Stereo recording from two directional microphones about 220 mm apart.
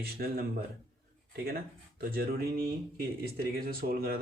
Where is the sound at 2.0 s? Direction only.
45° right (ahead or behind).